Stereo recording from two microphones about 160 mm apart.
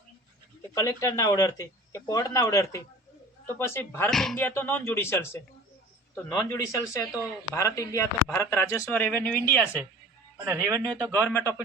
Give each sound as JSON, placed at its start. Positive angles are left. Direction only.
{"t": 0.7, "sound": "speech", "side_deg": 20}
{"t": 4.1, "sound": "speech", "side_deg": 0}
{"t": 4.4, "sound": "speech", "side_deg": 10}
{"t": 10.4, "sound": "speech", "side_deg": -20}
{"t": 10.8, "sound": "speech", "side_deg": 0}
{"t": 11.1, "sound": "speech", "side_deg": 10}